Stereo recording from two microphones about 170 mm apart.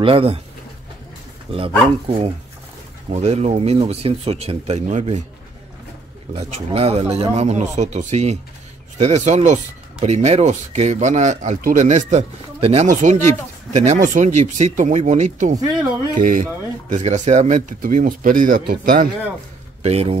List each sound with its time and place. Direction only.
0.0 s speech: 35° right (ahead or behind)
1.5 s speech: 35° right (ahead or behind)
6.3 s speech: 35° right (ahead or behind)
15.5 s speech: 20° right (ahead or behind)
16.2 s speech: 50° right (ahead or behind)
19.8 s speech: 35° right (ahead or behind)